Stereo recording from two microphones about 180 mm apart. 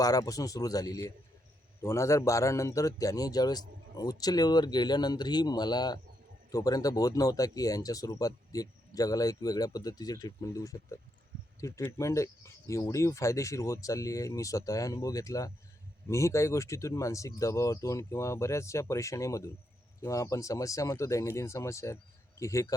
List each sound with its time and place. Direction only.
0.0 s speech: 20° left (ahead or behind)